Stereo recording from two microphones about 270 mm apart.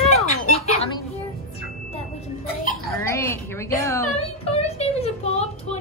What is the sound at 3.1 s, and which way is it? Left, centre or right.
Speech, centre.